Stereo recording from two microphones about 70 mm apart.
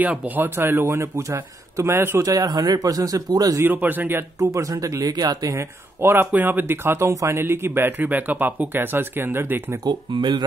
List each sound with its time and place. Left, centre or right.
0.0 s speech: right
0.6 s speech: right
2.2 s speech: right
3.6 s speech: right
4.6 s speech: right
5.6 s speech: right
7.1 s speech: right
7.3 s speech: right
9.8 s speech: right